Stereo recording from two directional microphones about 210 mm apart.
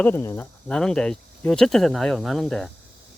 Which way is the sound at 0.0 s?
10° left (ahead or behind).